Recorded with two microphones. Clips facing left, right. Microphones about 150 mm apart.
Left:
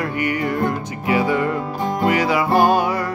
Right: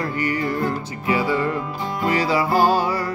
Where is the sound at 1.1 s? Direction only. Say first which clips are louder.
Left 2 dB; 20° left (ahead or behind).